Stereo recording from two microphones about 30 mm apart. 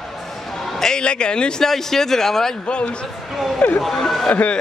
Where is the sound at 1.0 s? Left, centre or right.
Left.